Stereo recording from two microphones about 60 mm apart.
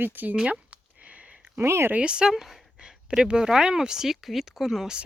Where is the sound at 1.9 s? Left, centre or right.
Centre.